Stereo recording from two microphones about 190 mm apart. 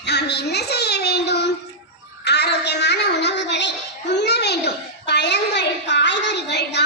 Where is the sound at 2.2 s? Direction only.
60° left (ahead or behind).